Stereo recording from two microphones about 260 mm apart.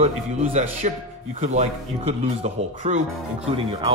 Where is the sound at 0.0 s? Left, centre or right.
Right.